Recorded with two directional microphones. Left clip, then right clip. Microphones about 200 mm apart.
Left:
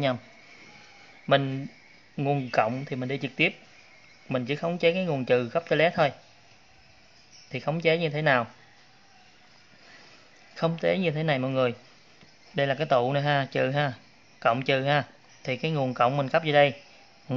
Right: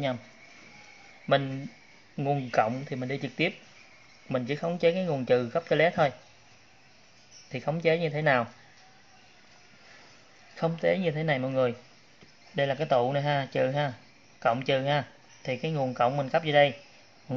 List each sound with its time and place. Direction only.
1.2 s speech: 15° left (ahead or behind)
7.5 s speech: 10° left (ahead or behind)
10.5 s speech: 10° left (ahead or behind)